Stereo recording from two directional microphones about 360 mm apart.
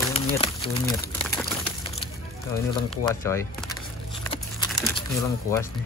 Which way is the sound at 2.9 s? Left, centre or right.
Centre.